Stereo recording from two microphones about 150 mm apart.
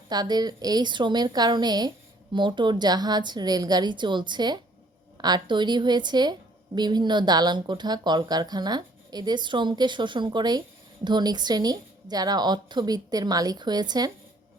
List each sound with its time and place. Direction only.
0.1 s speech: 25° right (ahead or behind)